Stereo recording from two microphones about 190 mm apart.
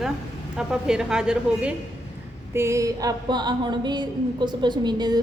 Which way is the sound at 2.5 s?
15° right (ahead or behind).